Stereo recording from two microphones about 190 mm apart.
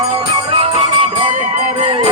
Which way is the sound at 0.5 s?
30° right (ahead or behind).